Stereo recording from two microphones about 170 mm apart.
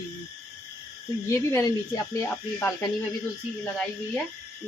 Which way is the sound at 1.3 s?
15° left (ahead or behind).